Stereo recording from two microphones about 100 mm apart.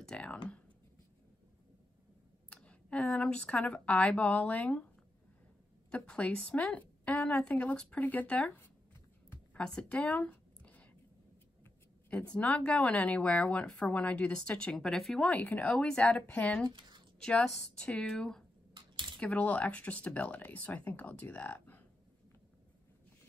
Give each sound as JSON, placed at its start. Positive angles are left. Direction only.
{"t": 0.0, "sound": "speech", "side_deg": 10}
{"t": 2.5, "sound": "speech", "side_deg": 10}
{"t": 5.9, "sound": "speech", "side_deg": 10}
{"t": 9.3, "sound": "a sound", "side_deg": 10}
{"t": 12.1, "sound": "speech", "side_deg": 15}
{"t": 15.2, "sound": "speech", "side_deg": 15}
{"t": 16.6, "sound": "a woman's voice", "side_deg": -55}
{"t": 17.2, "sound": "speech", "side_deg": 5}
{"t": 18.7, "sound": "a sound", "side_deg": -55}
{"t": 19.1, "sound": "speech", "side_deg": 15}